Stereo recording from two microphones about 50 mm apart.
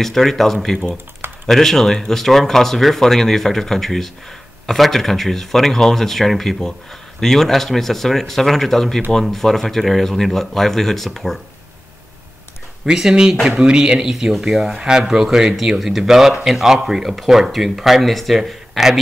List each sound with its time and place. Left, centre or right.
0.0 s speech: centre
12.8 s speech: centre